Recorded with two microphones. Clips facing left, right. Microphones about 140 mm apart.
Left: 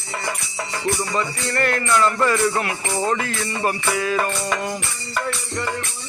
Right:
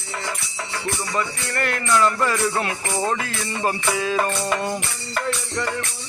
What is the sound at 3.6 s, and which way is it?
Music, 20° right (ahead or behind).